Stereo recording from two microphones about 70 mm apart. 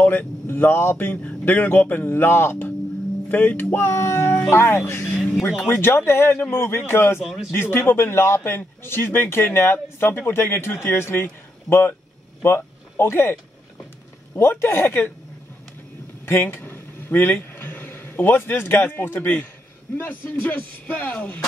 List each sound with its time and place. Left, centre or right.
0.0 s speech: left
5.1 s speech: centre
5.7 s speech: left
7.2 s a man's voice: centre
7.5 s speech: left
12.4 s speech: left
16.3 s a man's voice: left